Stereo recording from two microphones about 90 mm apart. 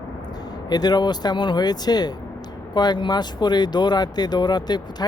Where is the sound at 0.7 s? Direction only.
50° left (ahead or behind).